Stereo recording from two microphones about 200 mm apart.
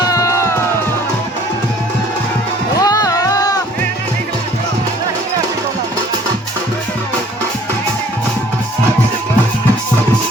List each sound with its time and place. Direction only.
0.0 s music: 15° left (ahead or behind)
2.8 s music: 20° left (ahead or behind)